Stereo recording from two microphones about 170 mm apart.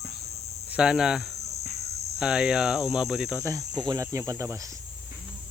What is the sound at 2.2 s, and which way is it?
Speech, 5° right (ahead or behind).